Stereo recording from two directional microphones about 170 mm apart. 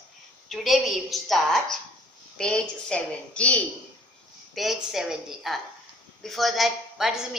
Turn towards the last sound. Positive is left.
turn(degrees=-5)  # may be behind; listen again after turning